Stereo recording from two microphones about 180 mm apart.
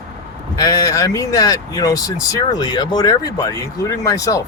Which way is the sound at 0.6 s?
20° left (ahead or behind).